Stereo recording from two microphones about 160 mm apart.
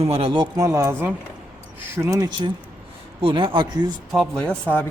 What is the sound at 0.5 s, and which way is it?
Speech, 20° right (ahead or behind).